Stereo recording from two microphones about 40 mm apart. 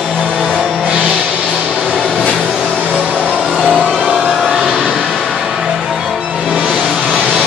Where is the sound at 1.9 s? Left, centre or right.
Left.